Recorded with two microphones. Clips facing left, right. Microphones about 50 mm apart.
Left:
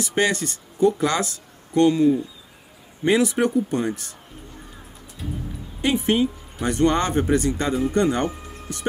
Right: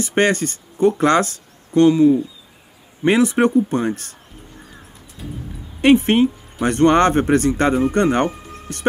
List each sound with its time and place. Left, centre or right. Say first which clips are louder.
0.0 s speech: right 5 dB; right
1.7 s speech: right 5 dB; right
3.1 s speech: right 4 dB; right
5.8 s speech: right 7 dB; right